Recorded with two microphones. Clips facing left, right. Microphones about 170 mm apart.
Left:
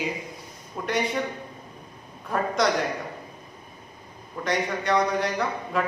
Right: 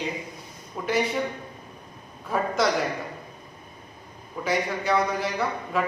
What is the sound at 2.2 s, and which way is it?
Speech, centre (ahead or behind).